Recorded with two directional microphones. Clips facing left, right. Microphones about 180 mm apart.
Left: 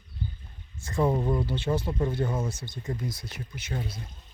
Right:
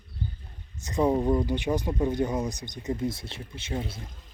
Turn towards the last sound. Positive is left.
turn(degrees=-25)  # may be behind; listen again after turning